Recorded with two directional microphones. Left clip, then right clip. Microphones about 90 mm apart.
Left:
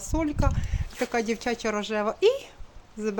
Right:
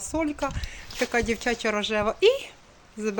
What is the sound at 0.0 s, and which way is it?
Speech, 10° left (ahead or behind).